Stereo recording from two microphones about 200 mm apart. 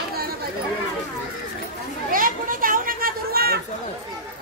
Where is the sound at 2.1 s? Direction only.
45° right (ahead or behind).